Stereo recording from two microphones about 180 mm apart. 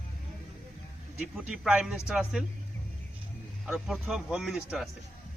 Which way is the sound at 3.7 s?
5° right (ahead or behind).